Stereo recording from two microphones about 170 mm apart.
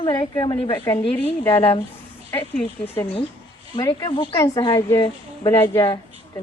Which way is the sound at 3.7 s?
25° left (ahead or behind).